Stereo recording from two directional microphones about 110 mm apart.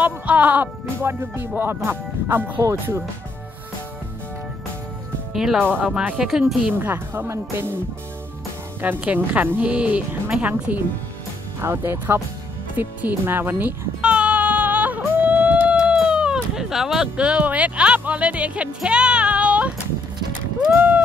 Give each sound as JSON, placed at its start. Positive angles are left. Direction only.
{"t": 0.0, "sound": "speech", "side_deg": -15}
{"t": 5.3, "sound": "speech", "side_deg": -5}
{"t": 6.7, "sound": "speech", "side_deg": -20}
{"t": 8.8, "sound": "speech", "side_deg": -15}
{"t": 12.7, "sound": "music", "side_deg": -20}
{"t": 20.7, "sound": "clip-clop", "side_deg": -15}